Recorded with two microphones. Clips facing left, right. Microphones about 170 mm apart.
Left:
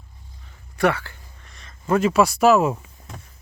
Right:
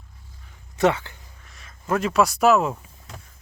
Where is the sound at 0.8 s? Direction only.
20° right (ahead or behind).